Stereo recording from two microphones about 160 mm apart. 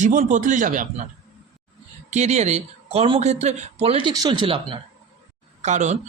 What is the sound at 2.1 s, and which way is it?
Speech, 45° right (ahead or behind).